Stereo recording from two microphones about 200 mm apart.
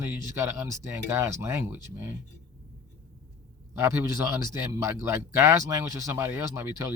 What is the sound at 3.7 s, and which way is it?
Speech, 10° right (ahead or behind).